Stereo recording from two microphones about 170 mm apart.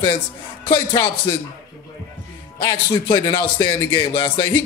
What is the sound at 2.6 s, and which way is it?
A man's voice, 30° left (ahead or behind).